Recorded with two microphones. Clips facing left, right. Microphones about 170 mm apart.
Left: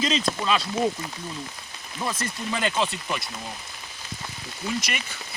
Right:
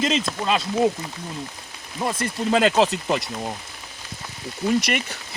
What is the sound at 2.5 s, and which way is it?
Speech, 90° right.